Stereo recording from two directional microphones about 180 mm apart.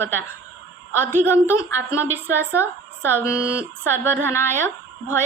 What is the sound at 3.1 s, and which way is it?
Speech, 10° right (ahead or behind).